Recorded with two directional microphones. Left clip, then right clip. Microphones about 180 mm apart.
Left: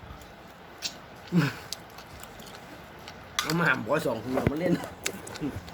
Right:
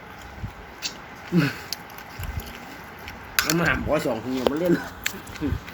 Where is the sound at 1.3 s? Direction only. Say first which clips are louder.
Right 5 dB; 20° left (ahead or behind).